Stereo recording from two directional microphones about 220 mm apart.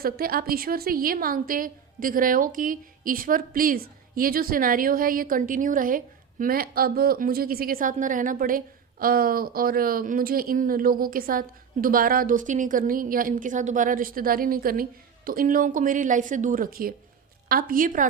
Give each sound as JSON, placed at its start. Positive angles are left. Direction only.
{"t": 0.0, "sound": "a woman's voice", "side_deg": -40}